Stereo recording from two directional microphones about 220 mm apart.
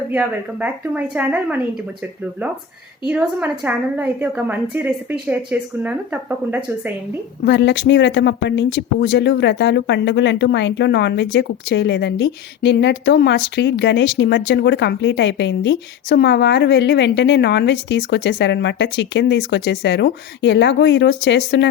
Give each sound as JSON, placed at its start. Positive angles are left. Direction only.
{"t": 0.1, "sound": "a woman's voice", "side_deg": -5}
{"t": 3.1, "sound": "a woman's voice", "side_deg": -5}
{"t": 7.4, "sound": "speech", "side_deg": 50}